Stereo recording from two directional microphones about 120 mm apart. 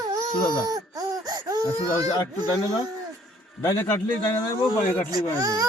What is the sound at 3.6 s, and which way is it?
Speech, 25° left (ahead or behind).